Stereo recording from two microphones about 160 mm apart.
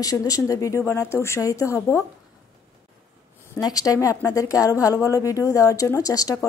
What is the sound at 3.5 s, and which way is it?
A woman's voice, 20° left (ahead or behind).